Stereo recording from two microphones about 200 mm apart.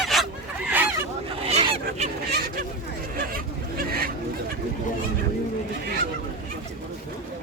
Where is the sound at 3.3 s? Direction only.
45° right (ahead or behind).